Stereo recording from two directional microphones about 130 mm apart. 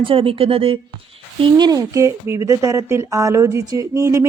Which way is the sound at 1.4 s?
35° right (ahead or behind).